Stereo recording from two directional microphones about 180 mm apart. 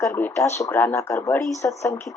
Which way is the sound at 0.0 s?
15° left (ahead or behind).